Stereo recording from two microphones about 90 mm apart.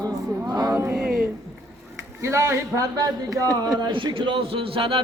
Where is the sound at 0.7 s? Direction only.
30° right (ahead or behind).